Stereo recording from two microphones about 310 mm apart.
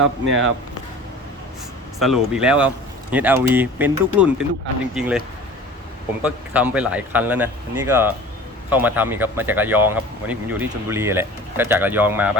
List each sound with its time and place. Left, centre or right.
0.0 s speech: right
2.0 s speech: centre
6.2 s speech: centre